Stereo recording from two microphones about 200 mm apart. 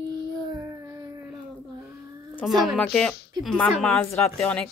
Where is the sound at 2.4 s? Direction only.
Centre (ahead or behind).